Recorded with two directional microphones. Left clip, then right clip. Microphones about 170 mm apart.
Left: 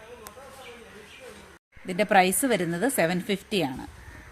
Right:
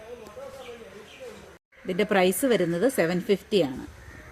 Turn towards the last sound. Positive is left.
turn(degrees=30)  # may be behind; listen again after turning